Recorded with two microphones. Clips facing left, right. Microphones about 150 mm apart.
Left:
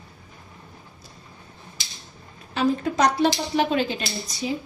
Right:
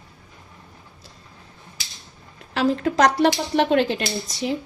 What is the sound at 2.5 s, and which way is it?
Speech, 90° right.